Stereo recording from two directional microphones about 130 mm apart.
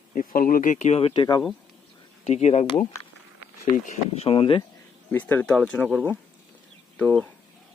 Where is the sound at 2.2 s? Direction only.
55° left (ahead or behind).